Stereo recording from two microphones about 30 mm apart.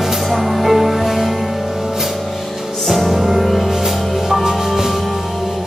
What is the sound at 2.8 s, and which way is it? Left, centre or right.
Music, centre.